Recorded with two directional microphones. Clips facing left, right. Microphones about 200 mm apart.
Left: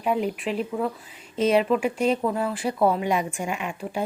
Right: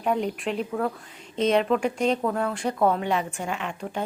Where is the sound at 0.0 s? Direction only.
5° left (ahead or behind).